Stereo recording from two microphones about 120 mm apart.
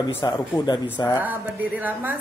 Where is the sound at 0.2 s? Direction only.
35° left (ahead or behind).